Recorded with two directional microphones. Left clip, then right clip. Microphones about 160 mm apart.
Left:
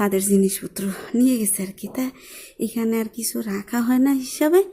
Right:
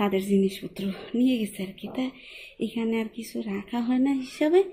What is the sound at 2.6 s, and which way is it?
Speech, 35° left (ahead or behind).